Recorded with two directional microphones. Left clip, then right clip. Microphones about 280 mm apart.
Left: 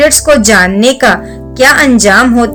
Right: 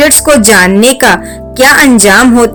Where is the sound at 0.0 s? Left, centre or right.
Right.